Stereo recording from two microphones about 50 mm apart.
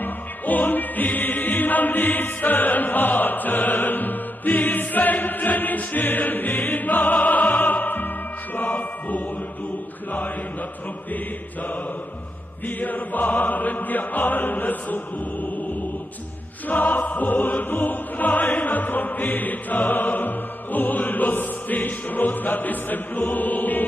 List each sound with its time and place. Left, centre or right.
0.0 s music: left
12.6 s music: left
16.6 s music: left